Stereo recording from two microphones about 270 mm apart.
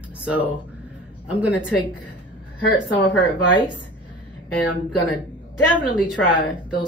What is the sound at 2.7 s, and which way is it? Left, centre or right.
Speech, centre.